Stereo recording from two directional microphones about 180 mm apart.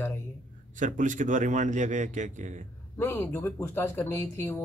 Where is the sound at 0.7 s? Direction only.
45° right (ahead or behind).